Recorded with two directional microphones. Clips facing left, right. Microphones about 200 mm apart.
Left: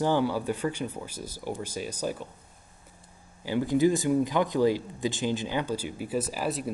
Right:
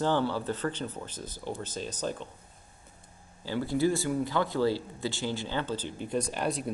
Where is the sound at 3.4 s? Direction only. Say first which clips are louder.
Left 4 dB; 15° left (ahead or behind).